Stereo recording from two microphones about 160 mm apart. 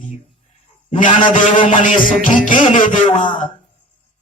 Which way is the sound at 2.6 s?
50° left (ahead or behind).